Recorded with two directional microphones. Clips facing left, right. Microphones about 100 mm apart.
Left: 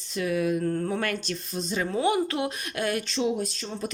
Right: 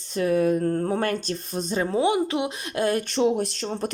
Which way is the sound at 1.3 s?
50° right (ahead or behind).